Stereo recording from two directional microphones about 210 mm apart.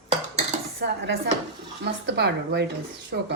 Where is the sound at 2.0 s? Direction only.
50° right (ahead or behind).